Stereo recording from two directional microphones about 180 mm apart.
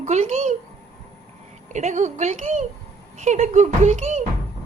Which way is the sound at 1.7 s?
40° right (ahead or behind).